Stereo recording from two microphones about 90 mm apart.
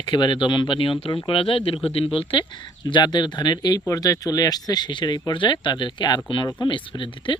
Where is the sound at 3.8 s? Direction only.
40° left (ahead or behind).